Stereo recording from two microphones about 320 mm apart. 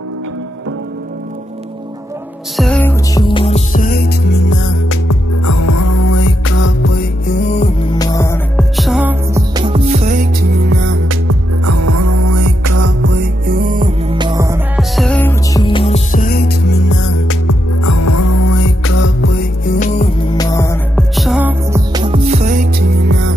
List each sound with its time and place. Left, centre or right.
2.5 s music: centre; by 4.4 s left
4.5 s music: left
4.8 s music: left
7.3 s music: left; by 10.8 s right
11.2 s music: right
12.7 s music: right; by 17.1 s left
17.1 s music: left
19.8 s music: centre; by 23.3 s right